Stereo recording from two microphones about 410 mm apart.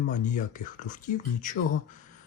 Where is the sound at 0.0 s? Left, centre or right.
Centre.